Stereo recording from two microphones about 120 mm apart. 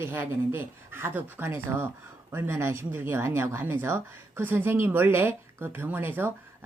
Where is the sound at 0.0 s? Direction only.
15° right (ahead or behind).